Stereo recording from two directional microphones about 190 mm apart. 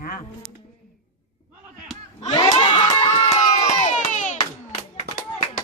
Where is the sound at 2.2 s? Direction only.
25° left (ahead or behind).